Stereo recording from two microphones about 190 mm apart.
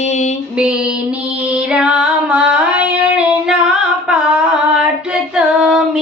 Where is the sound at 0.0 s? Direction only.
40° left (ahead or behind).